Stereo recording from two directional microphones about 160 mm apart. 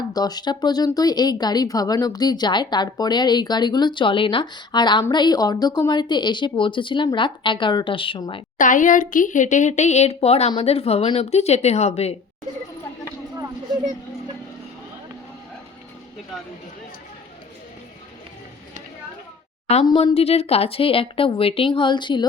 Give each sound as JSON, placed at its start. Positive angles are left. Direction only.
{"t": 0.1, "sound": "a woman's voice", "side_deg": 25}
{"t": 8.5, "sound": "a woman's voice", "side_deg": 55}
{"t": 19.8, "sound": "a woman's voice", "side_deg": 30}